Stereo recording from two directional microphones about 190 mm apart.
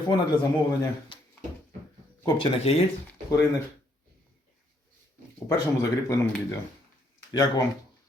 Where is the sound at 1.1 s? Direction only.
25° left (ahead or behind).